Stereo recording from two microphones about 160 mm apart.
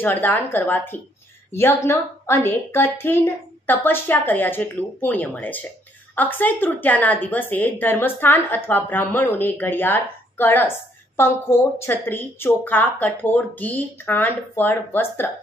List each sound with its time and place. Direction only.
0.0 s a woman's voice: 10° left (ahead or behind)